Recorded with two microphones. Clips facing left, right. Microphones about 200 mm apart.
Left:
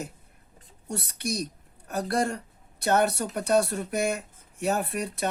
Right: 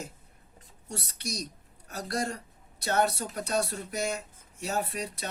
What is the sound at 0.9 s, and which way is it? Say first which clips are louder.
Speech: left 6 dB; 60° left (ahead or behind).